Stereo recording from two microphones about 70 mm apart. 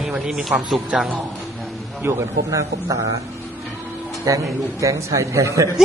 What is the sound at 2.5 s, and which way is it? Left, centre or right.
Speech, right.